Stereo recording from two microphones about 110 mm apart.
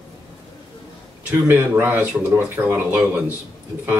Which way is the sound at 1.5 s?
15° right (ahead or behind).